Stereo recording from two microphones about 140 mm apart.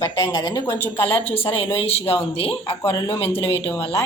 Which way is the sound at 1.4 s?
40° left (ahead or behind).